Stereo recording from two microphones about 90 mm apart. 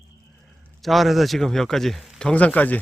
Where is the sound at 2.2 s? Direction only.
15° left (ahead or behind).